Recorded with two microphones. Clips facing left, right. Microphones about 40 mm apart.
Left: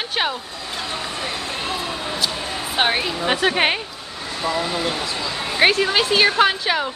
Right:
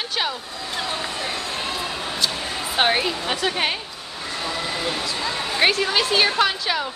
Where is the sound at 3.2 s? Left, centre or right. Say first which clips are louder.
Left 5 dB; left.